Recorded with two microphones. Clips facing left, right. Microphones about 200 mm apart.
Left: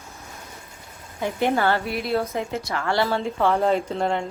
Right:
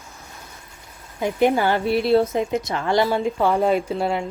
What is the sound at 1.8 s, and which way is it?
Speech, 30° right (ahead or behind).